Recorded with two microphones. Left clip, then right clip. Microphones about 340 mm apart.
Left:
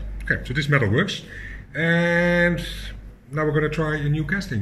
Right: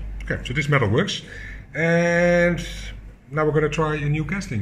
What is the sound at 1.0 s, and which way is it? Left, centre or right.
Speech, right.